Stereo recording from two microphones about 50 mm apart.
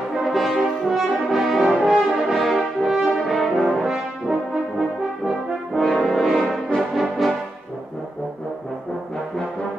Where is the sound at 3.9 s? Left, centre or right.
Centre.